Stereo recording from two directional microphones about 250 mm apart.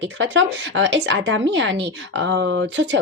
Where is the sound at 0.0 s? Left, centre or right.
Right.